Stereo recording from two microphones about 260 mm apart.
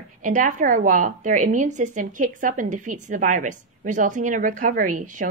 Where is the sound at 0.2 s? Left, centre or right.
Right.